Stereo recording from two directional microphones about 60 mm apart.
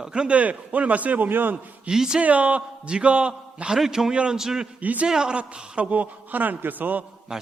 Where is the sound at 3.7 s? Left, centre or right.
Centre.